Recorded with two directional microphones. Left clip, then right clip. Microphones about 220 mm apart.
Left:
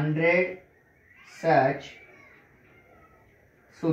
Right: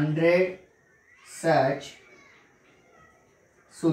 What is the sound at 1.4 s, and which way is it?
Speech, 5° left (ahead or behind).